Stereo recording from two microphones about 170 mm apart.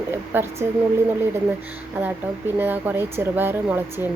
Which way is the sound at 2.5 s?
10° right (ahead or behind).